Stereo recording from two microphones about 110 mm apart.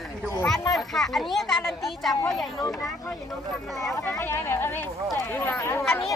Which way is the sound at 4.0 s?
25° left (ahead or behind).